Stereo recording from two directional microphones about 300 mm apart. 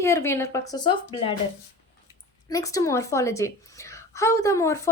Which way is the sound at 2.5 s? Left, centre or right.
Centre.